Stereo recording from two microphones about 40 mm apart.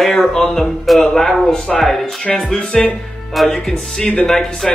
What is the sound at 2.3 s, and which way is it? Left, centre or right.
Speech, centre.